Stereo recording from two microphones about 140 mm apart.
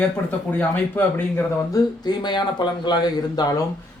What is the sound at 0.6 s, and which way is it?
Speech, 15° left (ahead or behind).